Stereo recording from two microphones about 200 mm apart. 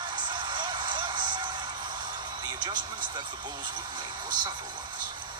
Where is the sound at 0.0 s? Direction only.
20° right (ahead or behind).